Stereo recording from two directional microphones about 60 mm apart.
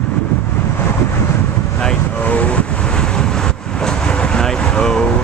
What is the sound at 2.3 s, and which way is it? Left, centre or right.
Vehicle, left.